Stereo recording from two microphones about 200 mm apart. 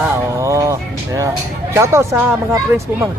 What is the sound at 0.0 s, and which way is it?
Music, 15° right (ahead or behind).